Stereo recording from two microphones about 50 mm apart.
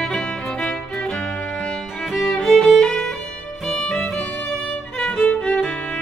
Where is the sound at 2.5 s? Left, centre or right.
Centre.